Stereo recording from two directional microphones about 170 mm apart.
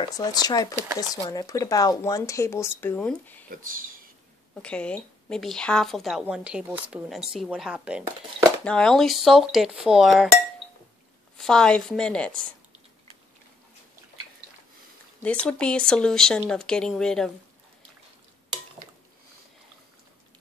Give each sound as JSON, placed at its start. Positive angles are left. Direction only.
{"t": 0.0, "sound": "speech", "side_deg": 25}
{"t": 3.4, "sound": "speech", "side_deg": -55}
{"t": 4.6, "sound": "a woman's voice", "side_deg": 5}
{"t": 8.6, "sound": "a woman's voice", "side_deg": 5}
{"t": 11.3, "sound": "a woman's voice", "side_deg": 5}
{"t": 15.2, "sound": "a woman's voice", "side_deg": 5}